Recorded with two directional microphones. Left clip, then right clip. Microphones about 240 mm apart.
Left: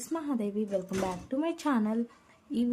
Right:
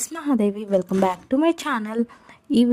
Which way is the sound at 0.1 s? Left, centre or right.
Right.